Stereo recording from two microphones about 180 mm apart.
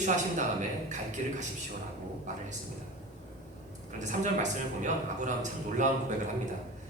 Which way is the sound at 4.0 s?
45° right (ahead or behind).